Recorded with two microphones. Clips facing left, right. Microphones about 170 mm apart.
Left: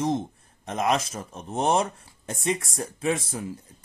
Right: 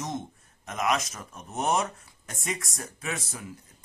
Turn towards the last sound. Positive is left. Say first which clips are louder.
# left 9 dB
turn(degrees=30)  # may be behind; listen again after turning